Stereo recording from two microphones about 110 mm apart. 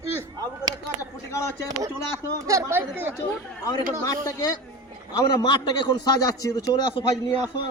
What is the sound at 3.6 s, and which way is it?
Speech, 30° left (ahead or behind).